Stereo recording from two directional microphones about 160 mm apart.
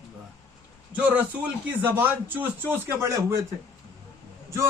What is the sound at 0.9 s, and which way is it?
Speech, 10° right (ahead or behind).